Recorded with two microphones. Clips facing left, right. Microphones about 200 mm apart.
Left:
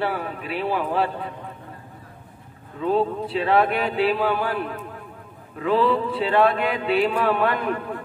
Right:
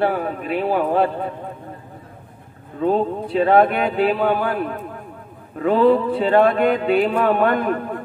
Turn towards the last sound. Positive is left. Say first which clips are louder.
# right 5 dB
turn(degrees=-45)  # may be behind; listen again after turning